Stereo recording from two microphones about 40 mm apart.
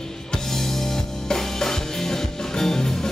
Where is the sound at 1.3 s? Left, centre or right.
Centre.